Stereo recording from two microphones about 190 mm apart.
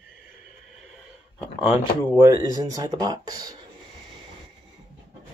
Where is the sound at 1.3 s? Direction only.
5° right (ahead or behind).